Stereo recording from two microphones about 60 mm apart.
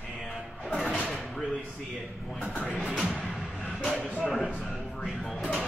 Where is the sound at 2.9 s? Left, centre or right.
Centre.